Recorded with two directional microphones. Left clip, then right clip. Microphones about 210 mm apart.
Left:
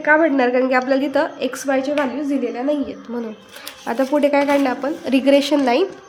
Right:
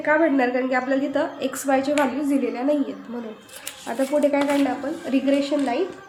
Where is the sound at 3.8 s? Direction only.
35° left (ahead or behind).